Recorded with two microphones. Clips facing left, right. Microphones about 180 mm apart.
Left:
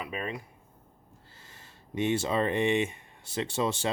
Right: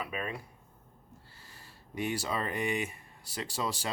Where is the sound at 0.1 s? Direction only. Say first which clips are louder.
Left 2 dB; 25° left (ahead or behind).